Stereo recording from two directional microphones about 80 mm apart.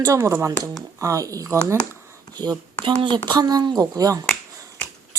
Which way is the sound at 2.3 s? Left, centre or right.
Right.